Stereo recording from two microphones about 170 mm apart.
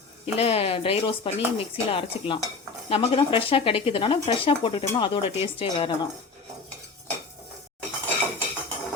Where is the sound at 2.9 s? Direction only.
35° left (ahead or behind).